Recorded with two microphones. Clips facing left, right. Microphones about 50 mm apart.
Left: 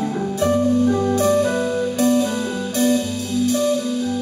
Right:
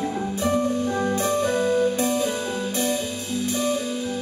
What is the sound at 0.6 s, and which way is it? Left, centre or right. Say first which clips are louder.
Music: left 6 dB; centre.